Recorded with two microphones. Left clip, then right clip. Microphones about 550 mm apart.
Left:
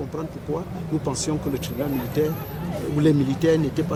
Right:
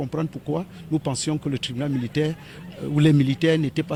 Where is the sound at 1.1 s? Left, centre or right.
Right.